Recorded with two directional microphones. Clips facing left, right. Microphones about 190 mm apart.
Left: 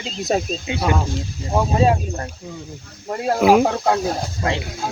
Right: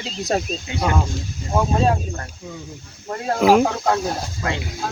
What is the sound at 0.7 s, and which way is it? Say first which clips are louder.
Speech: left 3 dB; 20° left (ahead or behind).